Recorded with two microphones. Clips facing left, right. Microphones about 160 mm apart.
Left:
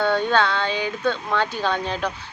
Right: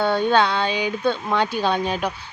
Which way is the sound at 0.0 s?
15° right (ahead or behind).